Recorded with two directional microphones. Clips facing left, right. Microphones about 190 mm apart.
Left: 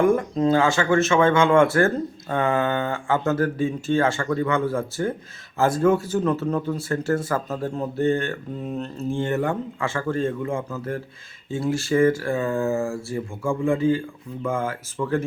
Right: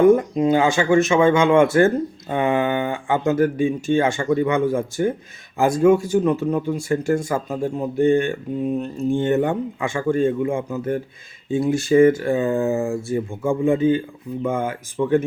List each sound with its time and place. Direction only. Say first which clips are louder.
0.0 s speech: right 5 dB; 20° right (ahead or behind)